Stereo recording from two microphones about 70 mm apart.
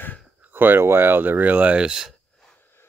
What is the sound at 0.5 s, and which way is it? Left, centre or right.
Speech, right.